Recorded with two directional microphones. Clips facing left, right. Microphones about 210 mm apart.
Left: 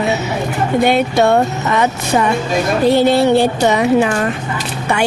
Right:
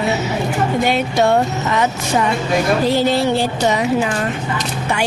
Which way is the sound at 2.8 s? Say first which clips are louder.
Left 4 dB; 60° left (ahead or behind).